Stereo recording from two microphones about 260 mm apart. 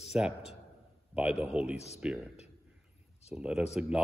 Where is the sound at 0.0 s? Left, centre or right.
Centre.